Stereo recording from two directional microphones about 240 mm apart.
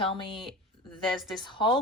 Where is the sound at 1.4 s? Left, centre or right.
Centre.